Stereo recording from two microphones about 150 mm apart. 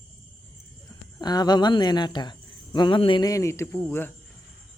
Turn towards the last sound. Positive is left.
turn(degrees=15)  # may be behind; listen again after turning